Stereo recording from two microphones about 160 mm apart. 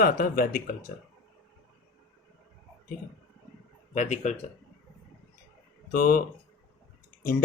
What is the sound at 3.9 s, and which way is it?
Speech, 50° left (ahead or behind).